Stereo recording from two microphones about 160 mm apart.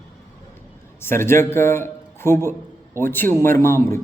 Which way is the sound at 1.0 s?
15° left (ahead or behind).